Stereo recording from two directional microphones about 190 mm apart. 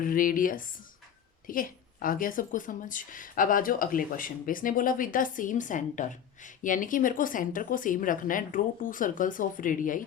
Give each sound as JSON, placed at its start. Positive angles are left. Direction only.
{"t": 0.0, "sound": "a woman's voice", "side_deg": 45}